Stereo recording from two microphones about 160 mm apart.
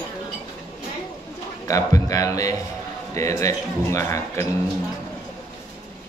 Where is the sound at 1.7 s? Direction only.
20° left (ahead or behind).